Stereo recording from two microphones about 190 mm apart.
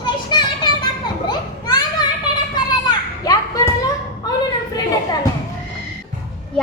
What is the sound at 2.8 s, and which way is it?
Children playing, 20° left (ahead or behind).